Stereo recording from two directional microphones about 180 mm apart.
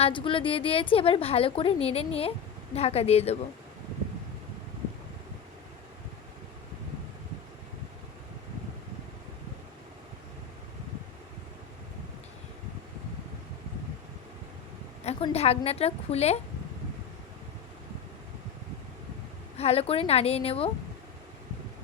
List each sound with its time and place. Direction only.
0.0 s a woman's voice: 30° left (ahead or behind)
15.0 s a woman's voice: 35° left (ahead or behind)
19.5 s a woman's voice: 35° left (ahead or behind)